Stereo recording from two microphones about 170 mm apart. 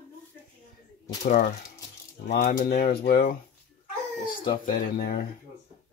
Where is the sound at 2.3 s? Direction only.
65° left (ahead or behind).